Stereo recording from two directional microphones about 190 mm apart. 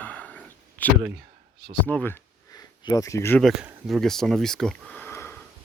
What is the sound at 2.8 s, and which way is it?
Speech, 20° left (ahead or behind).